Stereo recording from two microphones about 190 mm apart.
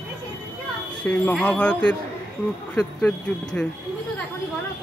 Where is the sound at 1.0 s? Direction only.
5° left (ahead or behind).